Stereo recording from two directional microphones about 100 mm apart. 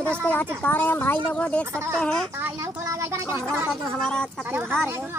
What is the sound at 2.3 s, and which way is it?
Speech, 25° right (ahead or behind).